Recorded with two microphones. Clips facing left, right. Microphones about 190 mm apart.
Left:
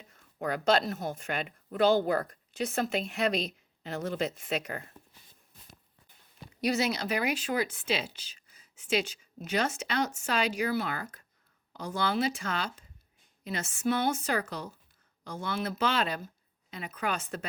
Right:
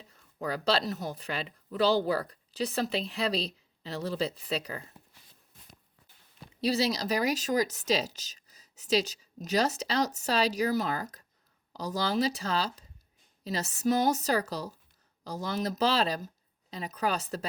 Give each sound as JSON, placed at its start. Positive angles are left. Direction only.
{"t": 0.0, "sound": "speech", "side_deg": -35}
{"t": 6.6, "sound": "speech", "side_deg": -35}